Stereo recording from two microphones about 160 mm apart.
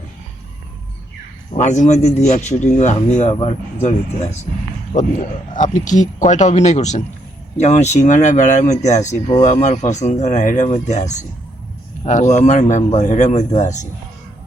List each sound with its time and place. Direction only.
1.5 s a man's voice: 45° left (ahead or behind)
5.5 s a man's voice: 55° left (ahead or behind)